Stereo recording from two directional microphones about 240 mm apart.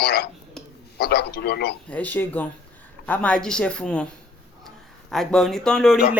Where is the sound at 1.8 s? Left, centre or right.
Centre.